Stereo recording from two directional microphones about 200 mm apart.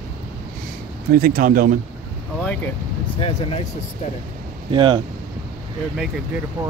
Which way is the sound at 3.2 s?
30° left (ahead or behind).